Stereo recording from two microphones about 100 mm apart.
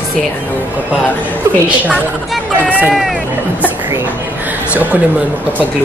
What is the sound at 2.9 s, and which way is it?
Speech, centre (ahead or behind).